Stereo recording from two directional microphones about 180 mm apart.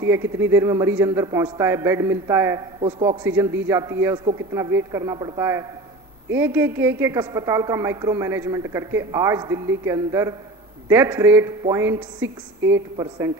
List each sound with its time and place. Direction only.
0.0 s a woman's voice: 15° right (ahead or behind)
3.2 s a woman's voice: 10° right (ahead or behind)